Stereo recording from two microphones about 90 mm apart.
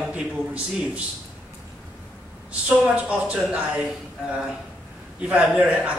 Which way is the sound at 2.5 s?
15° right (ahead or behind).